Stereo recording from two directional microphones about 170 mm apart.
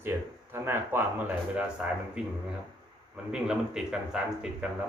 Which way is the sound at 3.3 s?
5° right (ahead or behind).